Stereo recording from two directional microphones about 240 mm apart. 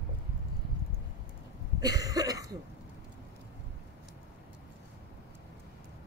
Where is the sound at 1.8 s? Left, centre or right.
Centre.